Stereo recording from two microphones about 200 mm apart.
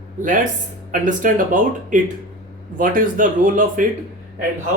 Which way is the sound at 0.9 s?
40° right (ahead or behind).